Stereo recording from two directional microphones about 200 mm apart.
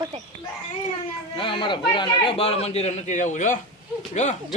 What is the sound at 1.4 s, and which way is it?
A man's voice, 25° left (ahead or behind).